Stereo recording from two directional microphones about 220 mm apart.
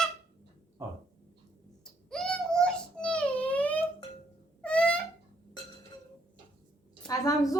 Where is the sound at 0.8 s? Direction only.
15° right (ahead or behind).